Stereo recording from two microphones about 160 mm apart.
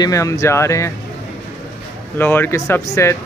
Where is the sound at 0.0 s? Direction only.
20° left (ahead or behind).